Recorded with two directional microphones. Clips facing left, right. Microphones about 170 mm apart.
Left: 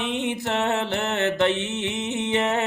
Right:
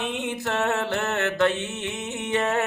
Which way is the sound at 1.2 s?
20° left (ahead or behind).